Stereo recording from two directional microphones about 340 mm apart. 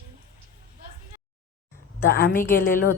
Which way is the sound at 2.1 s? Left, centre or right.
Left.